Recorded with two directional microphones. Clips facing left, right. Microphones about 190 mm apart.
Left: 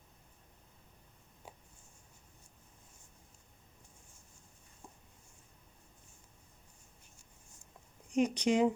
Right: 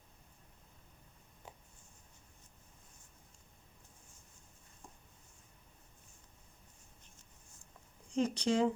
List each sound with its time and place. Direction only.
8.1 s speech: 15° left (ahead or behind)